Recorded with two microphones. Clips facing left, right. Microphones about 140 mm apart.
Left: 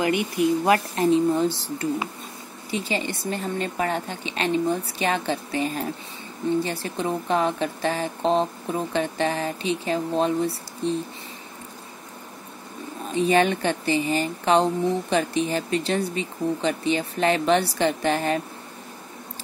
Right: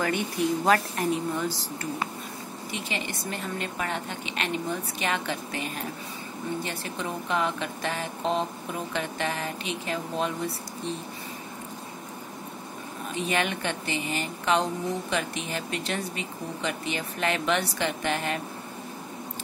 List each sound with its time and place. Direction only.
0.0 s speech: 10° left (ahead or behind)
0.9 s speech: 30° left (ahead or behind)
2.7 s speech: 30° left (ahead or behind)
13.1 s speech: 35° left (ahead or behind)